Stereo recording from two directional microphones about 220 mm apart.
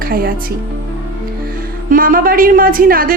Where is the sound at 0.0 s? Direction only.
45° right (ahead or behind).